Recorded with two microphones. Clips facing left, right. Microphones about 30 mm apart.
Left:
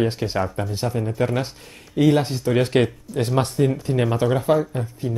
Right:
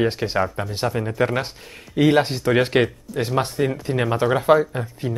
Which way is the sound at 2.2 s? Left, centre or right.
Right.